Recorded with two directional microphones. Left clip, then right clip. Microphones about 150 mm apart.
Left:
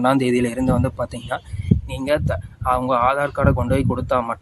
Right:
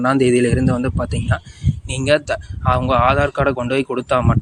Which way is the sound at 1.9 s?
25° right (ahead or behind).